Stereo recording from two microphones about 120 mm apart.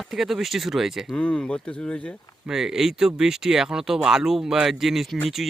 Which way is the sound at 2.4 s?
5° right (ahead or behind).